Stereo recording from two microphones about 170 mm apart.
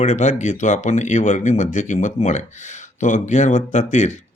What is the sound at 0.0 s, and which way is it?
Speech, 45° left (ahead or behind).